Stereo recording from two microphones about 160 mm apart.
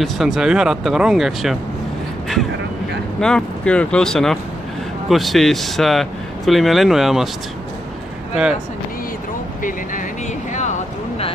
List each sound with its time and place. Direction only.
0.0 s speech: centre (ahead or behind)
3.2 s speech: 5° left (ahead or behind)
9.6 s speech: 55° left (ahead or behind)
10.5 s a sound: 50° left (ahead or behind)